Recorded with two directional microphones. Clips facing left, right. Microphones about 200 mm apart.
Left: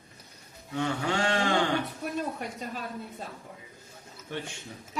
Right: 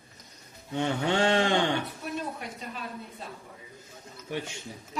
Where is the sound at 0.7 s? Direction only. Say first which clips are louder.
Right 2 dB; 25° right (ahead or behind).